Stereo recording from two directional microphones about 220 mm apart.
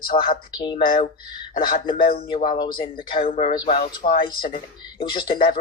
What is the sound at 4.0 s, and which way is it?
Speech, 40° left (ahead or behind).